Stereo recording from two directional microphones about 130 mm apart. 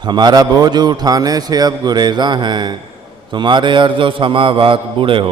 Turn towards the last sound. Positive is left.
turn(degrees=-40)  # may be behind; listen again after turning